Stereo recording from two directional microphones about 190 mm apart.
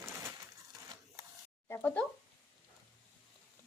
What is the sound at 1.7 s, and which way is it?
Speech, 10° left (ahead or behind).